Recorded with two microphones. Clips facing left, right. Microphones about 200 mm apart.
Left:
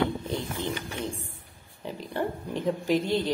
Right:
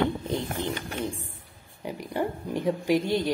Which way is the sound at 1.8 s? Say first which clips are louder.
Right 1 dB; 15° right (ahead or behind).